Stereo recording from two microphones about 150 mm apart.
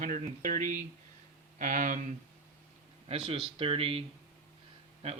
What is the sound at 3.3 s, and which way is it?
Speech, 35° right (ahead or behind).